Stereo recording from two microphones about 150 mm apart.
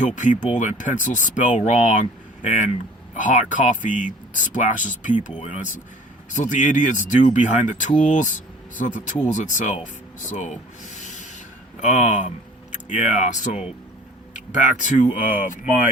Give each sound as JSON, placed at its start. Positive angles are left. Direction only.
{"t": 0.0, "sound": "speech", "side_deg": 55}
{"t": 9.3, "sound": "speech", "side_deg": 55}